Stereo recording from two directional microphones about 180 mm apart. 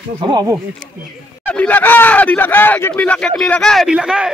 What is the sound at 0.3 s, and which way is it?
Speech, 20° right (ahead or behind).